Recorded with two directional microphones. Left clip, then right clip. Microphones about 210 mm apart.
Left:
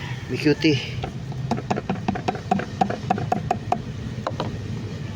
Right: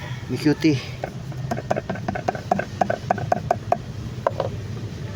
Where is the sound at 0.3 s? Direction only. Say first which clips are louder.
Even; 20° right (ahead or behind).